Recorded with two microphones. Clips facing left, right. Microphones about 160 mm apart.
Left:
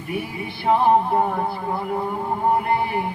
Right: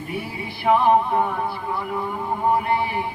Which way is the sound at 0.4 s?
25° left (ahead or behind).